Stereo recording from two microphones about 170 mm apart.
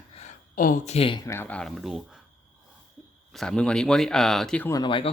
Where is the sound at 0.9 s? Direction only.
30° left (ahead or behind).